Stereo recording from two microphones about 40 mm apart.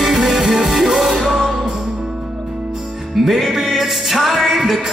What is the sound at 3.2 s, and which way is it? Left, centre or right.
Music, centre.